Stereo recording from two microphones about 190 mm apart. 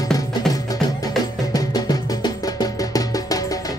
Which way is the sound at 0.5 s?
20° left (ahead or behind).